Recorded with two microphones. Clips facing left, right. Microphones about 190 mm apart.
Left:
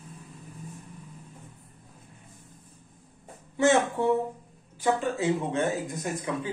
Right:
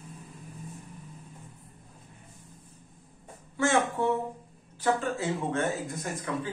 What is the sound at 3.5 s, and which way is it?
Speech, 20° left (ahead or behind).